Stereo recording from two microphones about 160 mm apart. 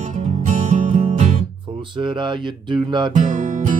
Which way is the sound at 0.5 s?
45° right (ahead or behind).